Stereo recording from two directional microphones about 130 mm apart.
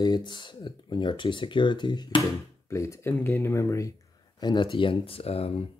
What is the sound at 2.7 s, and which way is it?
Speech, 20° left (ahead or behind).